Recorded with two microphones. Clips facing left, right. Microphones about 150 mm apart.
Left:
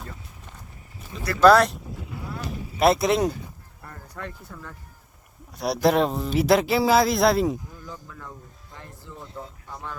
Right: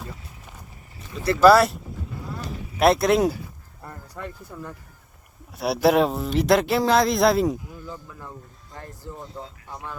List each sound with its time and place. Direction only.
1.4 s speech: 5° right (ahead or behind)
9.1 s speech: 45° right (ahead or behind)
9.6 s speech: 10° right (ahead or behind)